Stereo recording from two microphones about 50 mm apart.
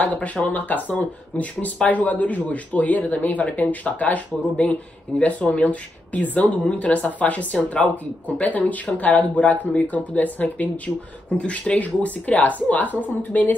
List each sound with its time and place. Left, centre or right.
0.0 s speech: left